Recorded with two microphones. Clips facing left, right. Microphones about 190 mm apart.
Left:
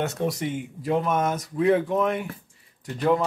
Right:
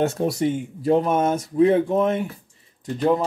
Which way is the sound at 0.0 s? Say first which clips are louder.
Right 5 dB; 30° right (ahead or behind).